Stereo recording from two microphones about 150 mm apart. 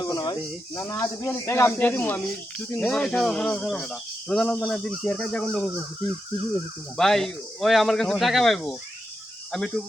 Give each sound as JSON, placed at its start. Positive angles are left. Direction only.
{"t": 0.0, "sound": "speech", "side_deg": 25}
{"t": 6.9, "sound": "speech", "side_deg": 5}